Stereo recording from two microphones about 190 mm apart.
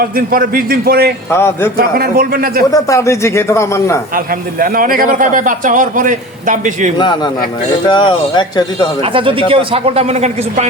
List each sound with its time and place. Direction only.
0.0 s a man's voice: 50° right (ahead or behind)
1.3 s speech: 10° left (ahead or behind)
2.0 s a man's voice: 50° right (ahead or behind)
2.7 s speech: 15° left (ahead or behind)
4.6 s a man's voice: 50° right (ahead or behind)
7.9 s speech: 25° left (ahead or behind)
9.1 s speech: 30° right (ahead or behind)